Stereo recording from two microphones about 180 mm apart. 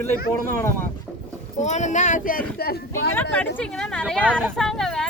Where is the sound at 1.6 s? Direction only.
40° left (ahead or behind); by 3.1 s 60° left (ahead or behind).